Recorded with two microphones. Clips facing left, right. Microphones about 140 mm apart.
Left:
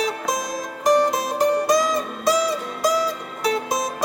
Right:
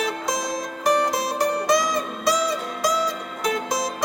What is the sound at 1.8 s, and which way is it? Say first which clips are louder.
Music: left 2 dB; 15° right (ahead or behind).